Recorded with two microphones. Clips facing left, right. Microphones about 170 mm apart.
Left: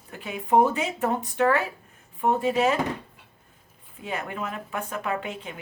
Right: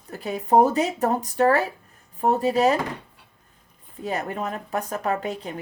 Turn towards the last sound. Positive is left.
turn(degrees=-40)  # may be behind; listen again after turning